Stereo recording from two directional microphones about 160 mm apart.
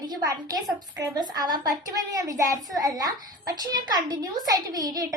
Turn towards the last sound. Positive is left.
turn(degrees=-20)  # may be behind; listen again after turning